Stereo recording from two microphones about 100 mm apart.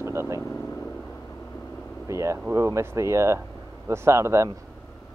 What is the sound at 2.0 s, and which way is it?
Speech, 30° right (ahead or behind).